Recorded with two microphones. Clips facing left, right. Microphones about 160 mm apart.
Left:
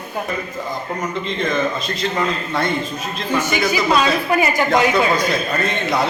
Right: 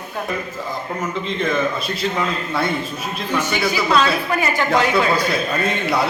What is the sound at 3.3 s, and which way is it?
A woman's voice, 10° left (ahead or behind).